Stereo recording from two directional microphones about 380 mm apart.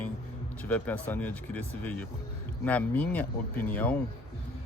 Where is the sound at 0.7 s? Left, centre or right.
Centre.